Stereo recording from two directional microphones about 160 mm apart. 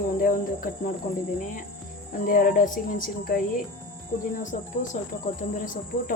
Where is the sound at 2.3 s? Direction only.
55° left (ahead or behind).